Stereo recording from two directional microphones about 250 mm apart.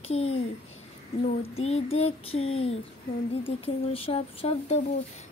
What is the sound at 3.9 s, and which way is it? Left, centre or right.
Speech, left.